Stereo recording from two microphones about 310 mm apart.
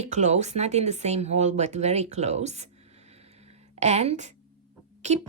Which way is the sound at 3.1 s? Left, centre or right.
Centre.